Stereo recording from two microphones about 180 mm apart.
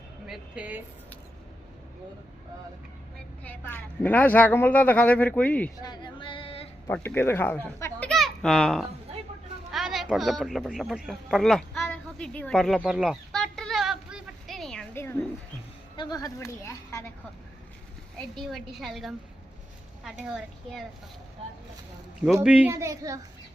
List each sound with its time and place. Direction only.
0.3 s a woman's voice: 5° right (ahead or behind)
3.4 s speech: 10° left (ahead or behind)
5.8 s female singing: 25° left (ahead or behind)
6.8 s speech: 10° left (ahead or behind)
9.7 s a sound: centre (ahead or behind)
16.0 s speech: 20° left (ahead or behind)
18.2 s a woman's voice: centre (ahead or behind)
22.4 s a child's voice: 10° right (ahead or behind)